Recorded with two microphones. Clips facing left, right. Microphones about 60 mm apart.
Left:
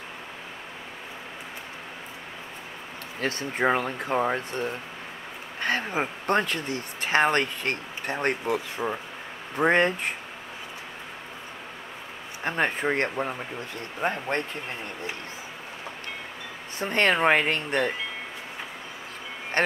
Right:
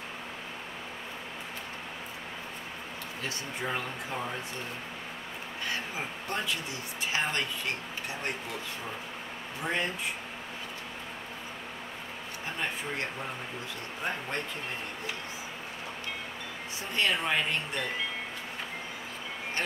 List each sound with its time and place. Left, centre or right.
3.2 s speech: left
12.4 s speech: left
16.8 s speech: left